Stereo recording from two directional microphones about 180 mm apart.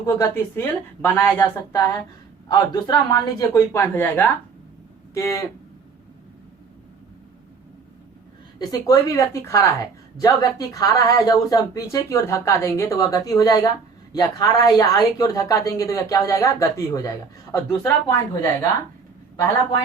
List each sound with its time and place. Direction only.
0.0 s speech: 15° left (ahead or behind)
8.5 s speech: 20° left (ahead or behind)